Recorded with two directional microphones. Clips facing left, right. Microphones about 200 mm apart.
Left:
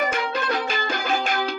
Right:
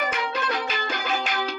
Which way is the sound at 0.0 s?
50° left (ahead or behind).